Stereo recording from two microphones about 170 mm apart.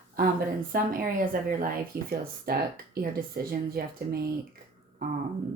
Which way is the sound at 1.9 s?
65° right (ahead or behind).